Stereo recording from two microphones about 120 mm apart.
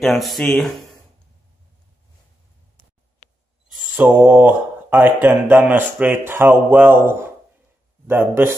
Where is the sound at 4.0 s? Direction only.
15° right (ahead or behind).